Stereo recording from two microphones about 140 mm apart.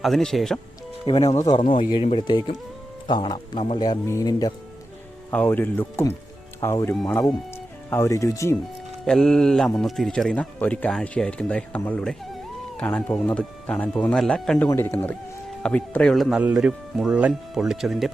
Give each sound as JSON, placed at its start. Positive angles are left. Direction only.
{"t": 0.0, "sound": "speech", "side_deg": 0}
{"t": 1.0, "sound": "speech", "side_deg": 40}
{"t": 3.8, "sound": "speech", "side_deg": 25}
{"t": 5.3, "sound": "speech", "side_deg": 10}
{"t": 9.0, "sound": "speech", "side_deg": 5}
{"t": 14.7, "sound": "speech", "side_deg": 15}